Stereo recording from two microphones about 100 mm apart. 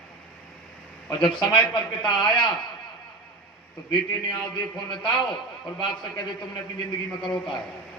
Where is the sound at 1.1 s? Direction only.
50° left (ahead or behind).